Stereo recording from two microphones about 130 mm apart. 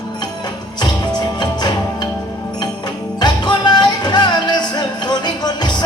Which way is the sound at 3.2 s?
35° left (ahead or behind).